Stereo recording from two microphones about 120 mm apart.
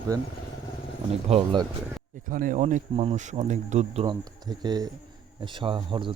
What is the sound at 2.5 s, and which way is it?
Speech, 90° right.